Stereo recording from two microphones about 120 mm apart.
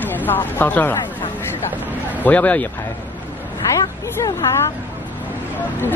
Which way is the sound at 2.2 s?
15° left (ahead or behind).